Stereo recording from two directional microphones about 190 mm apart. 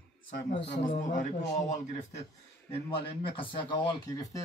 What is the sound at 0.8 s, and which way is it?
Speech, 40° left (ahead or behind).